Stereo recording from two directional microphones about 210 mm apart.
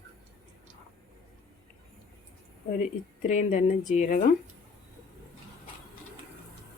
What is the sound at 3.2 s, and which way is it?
Speech, 35° left (ahead or behind).